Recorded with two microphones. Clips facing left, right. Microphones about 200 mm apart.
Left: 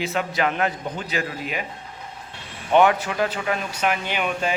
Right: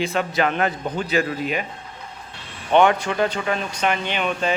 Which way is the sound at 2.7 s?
5° left (ahead or behind).